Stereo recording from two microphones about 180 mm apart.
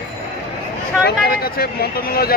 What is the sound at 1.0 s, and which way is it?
A man's voice, 55° left (ahead or behind).